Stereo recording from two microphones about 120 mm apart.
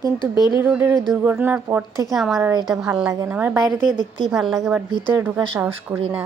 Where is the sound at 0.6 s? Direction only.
20° right (ahead or behind).